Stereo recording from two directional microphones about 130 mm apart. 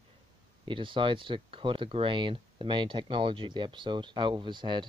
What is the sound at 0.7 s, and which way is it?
Speech, 40° right (ahead or behind).